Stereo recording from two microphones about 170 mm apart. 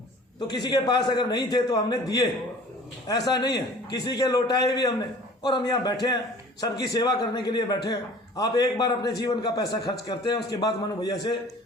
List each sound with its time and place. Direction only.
0.3 s a man's voice: 25° left (ahead or behind)